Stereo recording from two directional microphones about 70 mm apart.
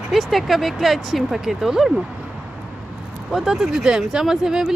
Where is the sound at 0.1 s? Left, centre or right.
Centre.